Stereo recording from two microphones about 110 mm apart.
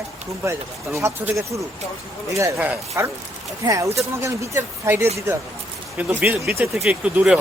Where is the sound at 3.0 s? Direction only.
25° right (ahead or behind); by 7.4 s 5° right (ahead or behind).